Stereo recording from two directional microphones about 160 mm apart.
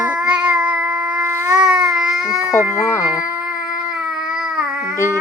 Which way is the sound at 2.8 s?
15° left (ahead or behind).